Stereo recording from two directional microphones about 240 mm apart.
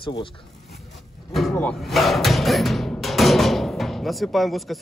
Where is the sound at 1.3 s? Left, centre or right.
Centre.